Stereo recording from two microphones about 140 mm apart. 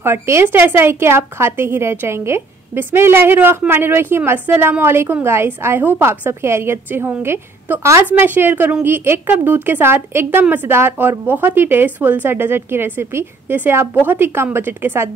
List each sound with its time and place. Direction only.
0.0 s a woman's voice: 15° right (ahead or behind)